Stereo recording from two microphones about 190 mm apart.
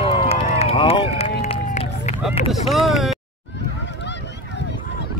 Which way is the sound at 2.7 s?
Centre (ahead or behind).